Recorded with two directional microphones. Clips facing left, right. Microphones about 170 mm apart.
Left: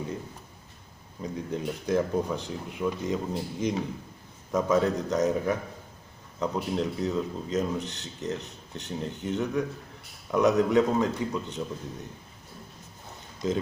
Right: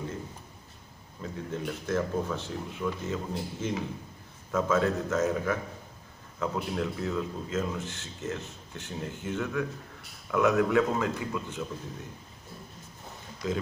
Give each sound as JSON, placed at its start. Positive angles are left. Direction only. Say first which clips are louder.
{"t": 1.2, "sound": "speech", "louder": "left 3 dB", "side_deg": 15}
{"t": 13.4, "sound": "speech", "louder": "left 3 dB", "side_deg": 20}